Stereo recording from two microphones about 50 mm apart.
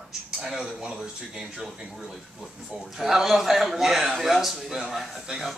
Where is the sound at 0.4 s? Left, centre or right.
Centre.